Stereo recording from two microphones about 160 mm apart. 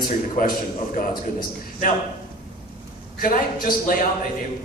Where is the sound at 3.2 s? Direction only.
60° left (ahead or behind).